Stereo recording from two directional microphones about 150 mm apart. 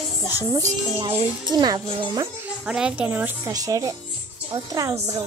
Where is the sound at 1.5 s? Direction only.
30° right (ahead or behind).